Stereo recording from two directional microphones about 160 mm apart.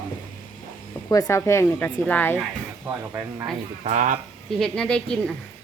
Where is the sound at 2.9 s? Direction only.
10° right (ahead or behind).